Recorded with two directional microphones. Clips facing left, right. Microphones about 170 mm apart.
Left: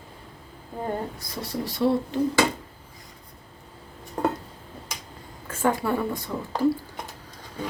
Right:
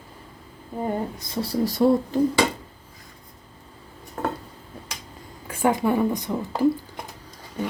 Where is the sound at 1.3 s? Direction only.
30° right (ahead or behind).